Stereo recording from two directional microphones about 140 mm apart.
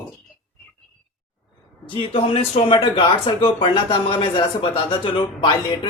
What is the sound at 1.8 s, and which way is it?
Speech, 40° left (ahead or behind).